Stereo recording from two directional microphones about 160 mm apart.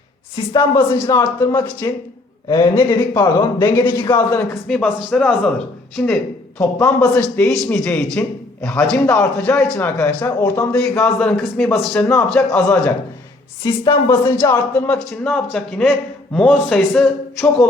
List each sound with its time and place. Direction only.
1.0 s speech: 20° left (ahead or behind)
4.7 s a man's voice: 5° left (ahead or behind)
6.6 s speech: 15° left (ahead or behind)
7.2 s a man's voice: 5° left (ahead or behind)
10.8 s a man's voice: 5° left (ahead or behind)
13.7 s speech: 30° left (ahead or behind)
14.8 s a man's voice: 5° left (ahead or behind)